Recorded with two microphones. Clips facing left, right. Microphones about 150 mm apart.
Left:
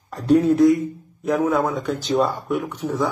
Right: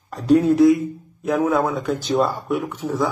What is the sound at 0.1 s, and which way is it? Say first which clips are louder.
A man's voice: right 1 dB; centre (ahead or behind).